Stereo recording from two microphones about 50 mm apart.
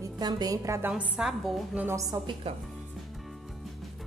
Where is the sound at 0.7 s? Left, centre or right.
Right.